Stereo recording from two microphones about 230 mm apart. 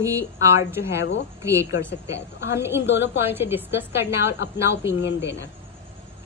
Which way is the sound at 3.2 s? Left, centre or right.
Centre.